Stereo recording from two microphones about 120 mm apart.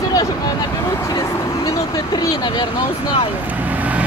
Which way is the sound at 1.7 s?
30° left (ahead or behind).